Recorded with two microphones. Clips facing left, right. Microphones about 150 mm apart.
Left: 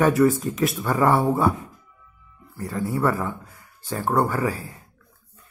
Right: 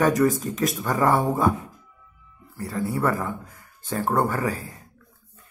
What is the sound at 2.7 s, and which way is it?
Speech, 40° left (ahead or behind).